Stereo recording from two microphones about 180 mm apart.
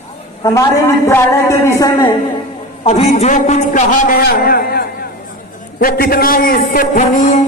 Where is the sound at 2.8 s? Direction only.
35° left (ahead or behind); by 5.0 s 55° left (ahead or behind).